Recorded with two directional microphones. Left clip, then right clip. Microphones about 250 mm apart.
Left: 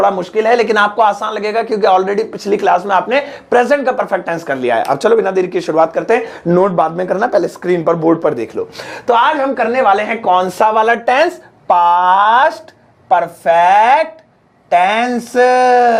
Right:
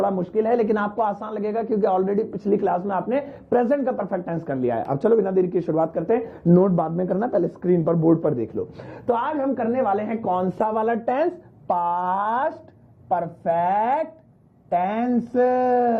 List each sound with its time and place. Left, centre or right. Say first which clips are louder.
0.0 s speech: left 9 dB; centre